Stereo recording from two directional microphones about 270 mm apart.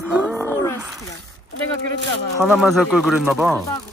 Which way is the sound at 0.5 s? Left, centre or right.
Centre.